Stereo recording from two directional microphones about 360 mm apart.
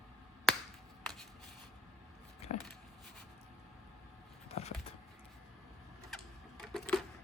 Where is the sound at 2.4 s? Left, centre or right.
Centre.